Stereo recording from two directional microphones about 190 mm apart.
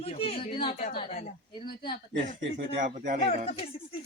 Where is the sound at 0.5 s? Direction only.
25° left (ahead or behind).